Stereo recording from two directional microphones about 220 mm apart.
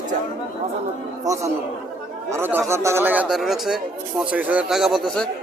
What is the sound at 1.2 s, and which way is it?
Speech, 15° right (ahead or behind).